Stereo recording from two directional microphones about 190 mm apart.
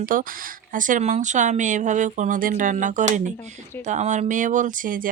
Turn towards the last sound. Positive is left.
turn(degrees=-45)  # may be behind; listen again after turning